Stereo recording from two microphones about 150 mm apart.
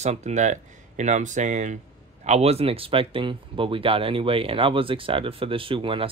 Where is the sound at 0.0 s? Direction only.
50° right (ahead or behind).